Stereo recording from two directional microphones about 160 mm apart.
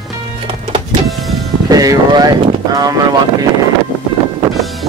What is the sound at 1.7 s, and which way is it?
Boat, 25° right (ahead or behind).